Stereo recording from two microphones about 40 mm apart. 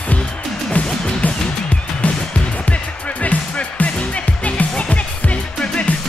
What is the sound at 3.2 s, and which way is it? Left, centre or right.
Music, left.